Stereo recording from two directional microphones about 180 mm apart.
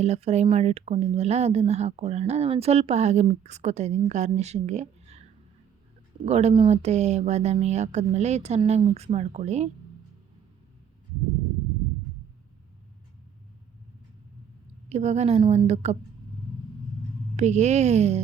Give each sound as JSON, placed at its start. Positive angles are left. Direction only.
{"t": 0.0, "sound": "speech", "side_deg": -35}
{"t": 14.8, "sound": "speech", "side_deg": -40}
{"t": 17.3, "sound": "speech", "side_deg": -40}